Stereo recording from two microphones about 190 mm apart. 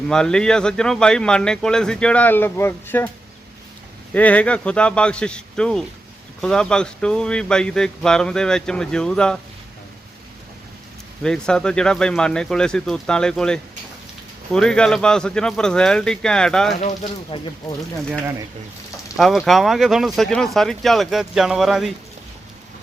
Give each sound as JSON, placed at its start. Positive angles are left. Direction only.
{"t": 0.1, "sound": "speech", "side_deg": 5}
{"t": 4.1, "sound": "speech", "side_deg": 10}
{"t": 11.2, "sound": "speech", "side_deg": 5}
{"t": 16.8, "sound": "speech", "side_deg": 25}
{"t": 19.1, "sound": "speech", "side_deg": 0}